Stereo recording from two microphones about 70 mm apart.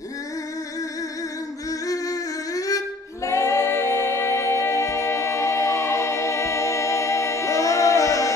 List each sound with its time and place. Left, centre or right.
1.9 s humming: left
3.3 s music: left